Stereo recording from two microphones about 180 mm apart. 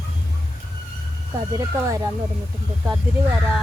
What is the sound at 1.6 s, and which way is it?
Speech, 15° right (ahead or behind).